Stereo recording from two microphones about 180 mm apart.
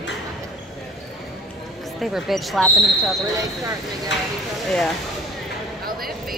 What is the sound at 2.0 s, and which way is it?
Speech, centre (ahead or behind).